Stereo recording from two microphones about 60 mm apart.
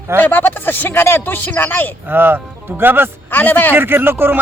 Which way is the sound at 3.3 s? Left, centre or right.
Left.